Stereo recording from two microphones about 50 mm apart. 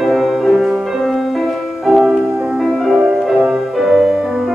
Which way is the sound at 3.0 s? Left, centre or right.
Centre.